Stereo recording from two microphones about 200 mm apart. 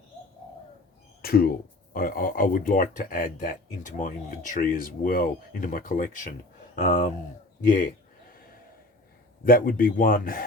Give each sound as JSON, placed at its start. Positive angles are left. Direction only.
{"t": 1.2, "sound": "speech", "side_deg": 50}
{"t": 9.4, "sound": "speech", "side_deg": 45}